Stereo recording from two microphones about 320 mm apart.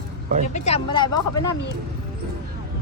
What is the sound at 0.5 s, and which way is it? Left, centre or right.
Speech, centre.